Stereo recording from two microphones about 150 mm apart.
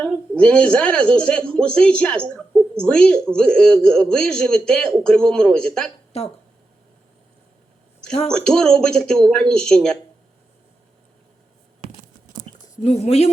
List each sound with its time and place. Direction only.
0.0 s a man's voice: 5° left (ahead or behind)
6.1 s speech: 45° left (ahead or behind)
8.3 s a man's voice: 5° left (ahead or behind)
12.6 s speech: 50° left (ahead or behind)